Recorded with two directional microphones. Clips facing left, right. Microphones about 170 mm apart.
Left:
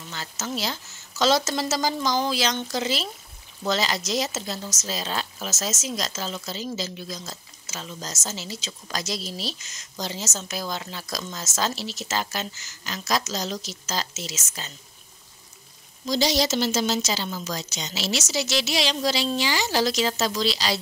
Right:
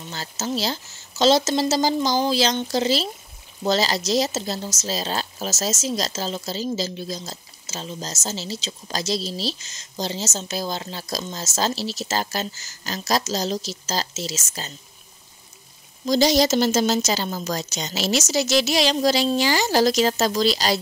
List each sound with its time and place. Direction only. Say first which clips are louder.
0.1 s speech: right 4 dB; 35° right (ahead or behind)
16.1 s a woman's voice: right 5 dB; 45° right (ahead or behind)